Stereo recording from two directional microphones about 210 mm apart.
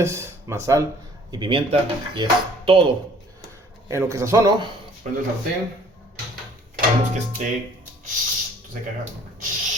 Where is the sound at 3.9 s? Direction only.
15° right (ahead or behind).